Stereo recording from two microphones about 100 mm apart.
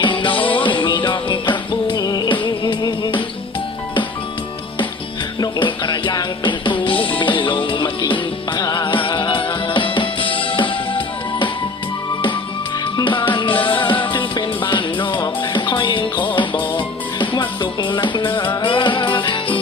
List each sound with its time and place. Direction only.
0.0 s music: 55° left (ahead or behind)
5.4 s music: 50° left (ahead or behind)
12.8 s music: 55° left (ahead or behind)